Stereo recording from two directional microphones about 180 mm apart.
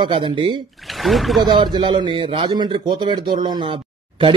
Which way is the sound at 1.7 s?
25° right (ahead or behind).